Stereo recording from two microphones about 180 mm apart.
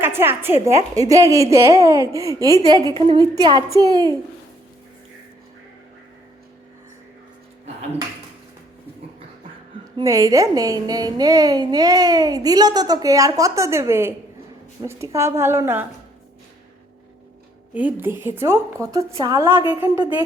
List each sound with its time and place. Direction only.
0.0 s speech: 10° right (ahead or behind)
2.9 s a woman's voice: 30° right (ahead or behind)
3.3 s a woman's voice: 20° right (ahead or behind)
10.0 s a woman's voice: 20° right (ahead or behind)
17.7 s speech: 10° right (ahead or behind)